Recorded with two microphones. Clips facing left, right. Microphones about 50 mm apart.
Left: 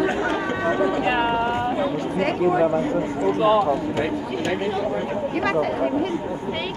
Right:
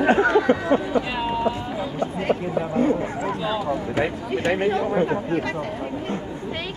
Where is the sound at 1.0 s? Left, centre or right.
Left.